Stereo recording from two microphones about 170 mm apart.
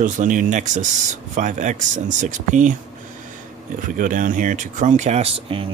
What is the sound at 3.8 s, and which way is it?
Speech, 50° right (ahead or behind).